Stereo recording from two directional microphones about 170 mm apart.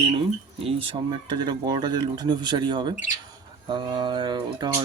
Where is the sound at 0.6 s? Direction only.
30° right (ahead or behind).